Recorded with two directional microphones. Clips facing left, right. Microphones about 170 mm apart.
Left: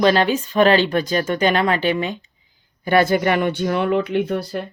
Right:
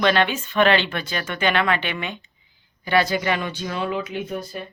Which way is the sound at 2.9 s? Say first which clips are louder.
Left 5 dB; 50° left (ahead or behind).